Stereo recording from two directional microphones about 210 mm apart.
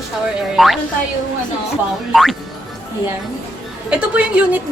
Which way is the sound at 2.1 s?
Centre (ahead or behind).